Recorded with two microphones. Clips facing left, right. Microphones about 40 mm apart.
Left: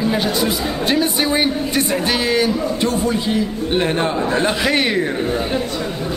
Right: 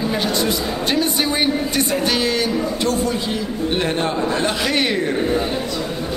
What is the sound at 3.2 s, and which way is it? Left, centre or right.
Speech, centre.